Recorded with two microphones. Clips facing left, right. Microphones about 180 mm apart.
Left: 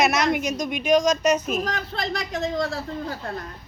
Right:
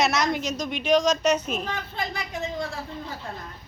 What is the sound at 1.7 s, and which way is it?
Speech, 80° left.